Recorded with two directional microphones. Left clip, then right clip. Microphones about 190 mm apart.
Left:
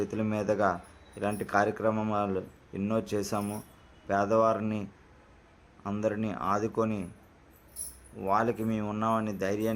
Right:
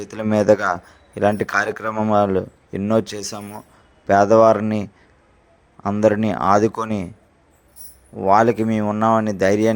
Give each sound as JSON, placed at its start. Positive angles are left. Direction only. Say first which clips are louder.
{"t": 0.0, "sound": "speech", "louder": "right 12 dB", "side_deg": -35}
{"t": 1.9, "sound": "speech", "louder": "right 9 dB", "side_deg": -20}
{"t": 2.1, "sound": "speech", "louder": "right 13 dB", "side_deg": -35}
{"t": 6.0, "sound": "speech", "louder": "right 14 dB", "side_deg": -40}
{"t": 8.3, "sound": "speech", "louder": "right 13 dB", "side_deg": -35}